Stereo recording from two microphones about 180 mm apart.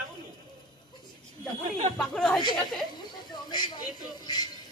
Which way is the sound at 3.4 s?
25° left (ahead or behind).